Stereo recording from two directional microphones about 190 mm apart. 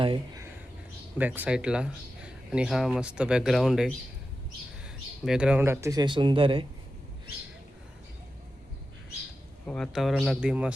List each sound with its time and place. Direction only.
0.0 s speech: 25° right (ahead or behind)
1.2 s speech: 10° right (ahead or behind); by 6.7 s 25° right (ahead or behind)
9.6 s speech: 5° left (ahead or behind)